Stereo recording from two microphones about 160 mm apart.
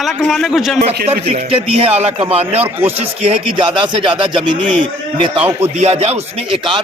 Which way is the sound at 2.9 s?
35° right (ahead or behind).